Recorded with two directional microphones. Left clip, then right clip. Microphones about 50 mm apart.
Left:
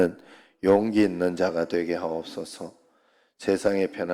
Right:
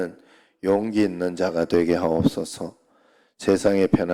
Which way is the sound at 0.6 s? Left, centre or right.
Centre.